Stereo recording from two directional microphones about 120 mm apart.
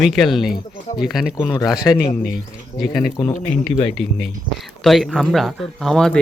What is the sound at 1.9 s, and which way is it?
Speech, 15° left (ahead or behind).